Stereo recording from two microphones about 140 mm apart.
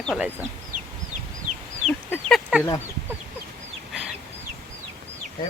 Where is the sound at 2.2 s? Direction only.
Centre (ahead or behind).